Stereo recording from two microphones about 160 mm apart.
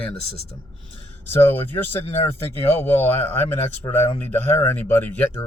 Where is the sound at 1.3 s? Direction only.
15° left (ahead or behind).